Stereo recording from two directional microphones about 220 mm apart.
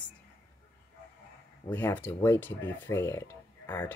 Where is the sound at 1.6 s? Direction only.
10° left (ahead or behind).